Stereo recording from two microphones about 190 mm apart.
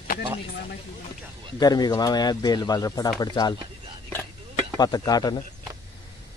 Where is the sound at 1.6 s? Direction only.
20° left (ahead or behind).